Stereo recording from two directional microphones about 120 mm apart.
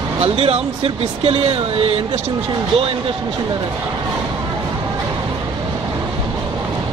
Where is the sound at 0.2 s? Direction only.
50° right (ahead or behind).